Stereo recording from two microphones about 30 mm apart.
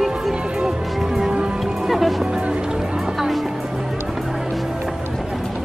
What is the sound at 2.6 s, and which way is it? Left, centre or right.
Music, right.